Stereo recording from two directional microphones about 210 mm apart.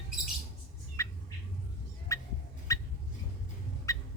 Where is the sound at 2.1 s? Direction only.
15° left (ahead or behind).